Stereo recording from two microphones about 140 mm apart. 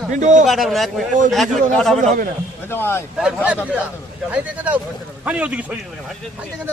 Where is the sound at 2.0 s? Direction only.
80° right.